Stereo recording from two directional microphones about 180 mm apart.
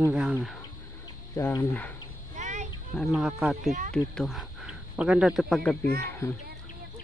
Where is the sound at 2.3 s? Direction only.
40° right (ahead or behind).